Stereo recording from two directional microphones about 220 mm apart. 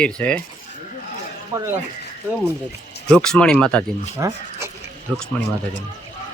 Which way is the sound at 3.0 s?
5° left (ahead or behind).